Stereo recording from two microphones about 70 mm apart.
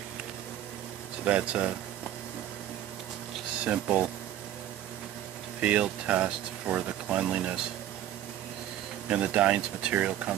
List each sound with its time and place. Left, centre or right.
1.2 s speech: centre
3.6 s speech: centre
5.6 s speech: centre
9.1 s speech: centre
9.9 s speech: right